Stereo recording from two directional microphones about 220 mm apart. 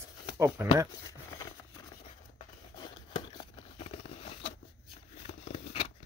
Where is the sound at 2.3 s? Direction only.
20° left (ahead or behind).